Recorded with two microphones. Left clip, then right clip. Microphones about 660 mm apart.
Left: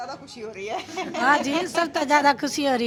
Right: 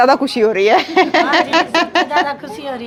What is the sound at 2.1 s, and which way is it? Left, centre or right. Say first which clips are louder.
Speech: right 2 dB; left.